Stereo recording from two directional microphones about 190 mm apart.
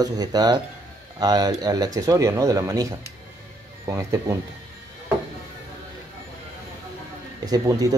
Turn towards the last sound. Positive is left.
turn(degrees=-20)  # may be behind; listen again after turning